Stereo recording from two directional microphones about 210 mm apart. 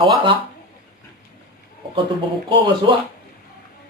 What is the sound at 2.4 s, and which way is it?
Speech, 25° right (ahead or behind).